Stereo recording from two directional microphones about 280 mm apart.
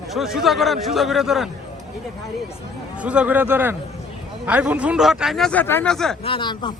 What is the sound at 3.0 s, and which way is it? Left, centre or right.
Speech, centre.